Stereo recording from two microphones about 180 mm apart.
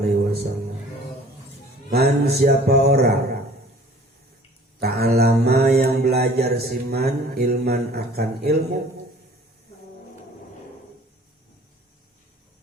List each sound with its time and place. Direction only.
0.0 s music: 60° right (ahead or behind)
1.9 s mantra: 60° right (ahead or behind)
4.8 s mantra: 60° right (ahead or behind)